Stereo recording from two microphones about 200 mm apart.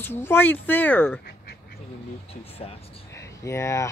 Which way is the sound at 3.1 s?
15° left (ahead or behind).